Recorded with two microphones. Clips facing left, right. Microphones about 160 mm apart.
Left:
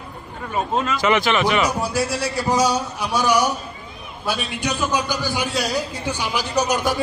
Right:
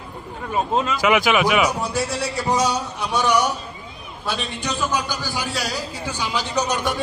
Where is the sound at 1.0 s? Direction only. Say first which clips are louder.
Right 1 dB; 5° right (ahead or behind).